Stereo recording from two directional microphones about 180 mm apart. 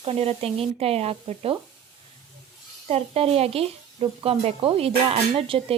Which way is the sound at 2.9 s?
35° right (ahead or behind).